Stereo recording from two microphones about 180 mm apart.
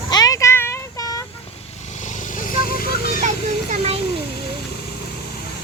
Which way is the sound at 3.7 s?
35° right (ahead or behind).